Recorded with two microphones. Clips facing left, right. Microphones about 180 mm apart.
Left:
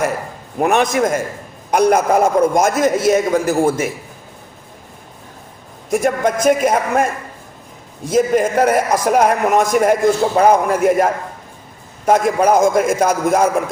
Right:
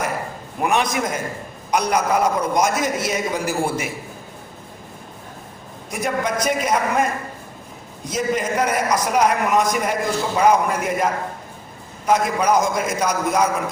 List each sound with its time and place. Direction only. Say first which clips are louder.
0.6 s a man's voice: left 6 dB; 50° left (ahead or behind)
5.9 s a man's voice: left 7 dB; 50° left (ahead or behind)
8.1 s a man's voice: left 7 dB; 50° left (ahead or behind)
12.0 s a man's voice: left 5 dB; 50° left (ahead or behind)